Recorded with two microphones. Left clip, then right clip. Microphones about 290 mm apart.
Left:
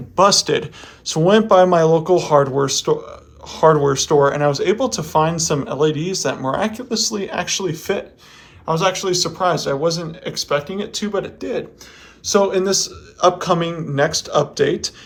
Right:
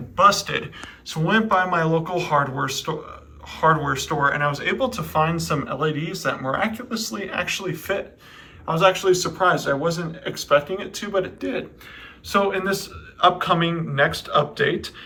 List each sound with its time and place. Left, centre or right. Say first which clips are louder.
0.2 s speech: left 3 dB; centre